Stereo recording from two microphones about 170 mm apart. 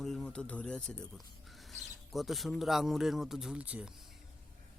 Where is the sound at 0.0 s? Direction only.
Centre (ahead or behind).